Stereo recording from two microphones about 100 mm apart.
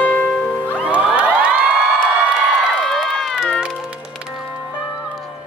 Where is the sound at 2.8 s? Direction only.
5° left (ahead or behind).